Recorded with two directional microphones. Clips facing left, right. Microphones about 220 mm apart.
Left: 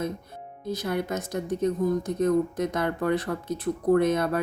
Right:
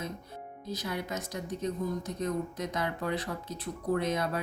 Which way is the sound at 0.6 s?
50° left (ahead or behind).